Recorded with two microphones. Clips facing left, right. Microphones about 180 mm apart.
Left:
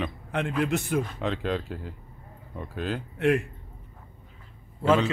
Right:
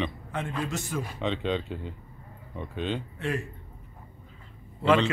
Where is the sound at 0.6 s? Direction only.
60° left (ahead or behind).